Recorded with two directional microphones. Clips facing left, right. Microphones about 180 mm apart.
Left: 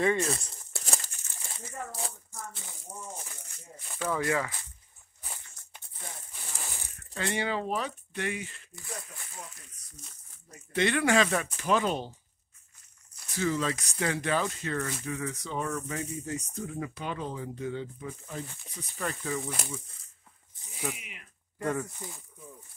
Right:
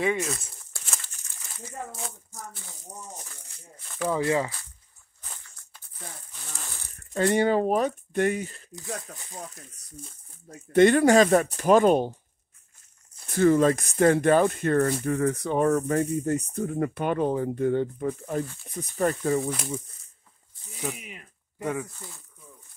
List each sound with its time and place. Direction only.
0.0 s speech: 5° right (ahead or behind)
0.8 s crumpling: 35° left (ahead or behind)
4.1 s speech: 25° right (ahead or behind)
5.2 s a sound: 15° left (ahead or behind)
7.2 s speech: 45° right (ahead or behind)
13.3 s speech: 55° right (ahead or behind)
20.9 s speech: 40° right (ahead or behind)
21.5 s speech: 5° right (ahead or behind)
21.9 s speech: 15° left (ahead or behind)